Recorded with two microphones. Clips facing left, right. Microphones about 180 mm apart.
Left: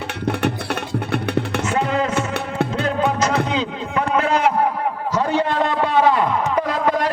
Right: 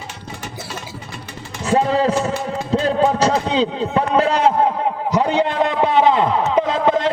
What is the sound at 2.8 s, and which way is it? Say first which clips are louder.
Music: right 5 dB; 35° right (ahead or behind).